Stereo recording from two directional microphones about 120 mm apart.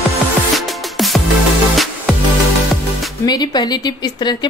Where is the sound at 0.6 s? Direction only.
Centre (ahead or behind).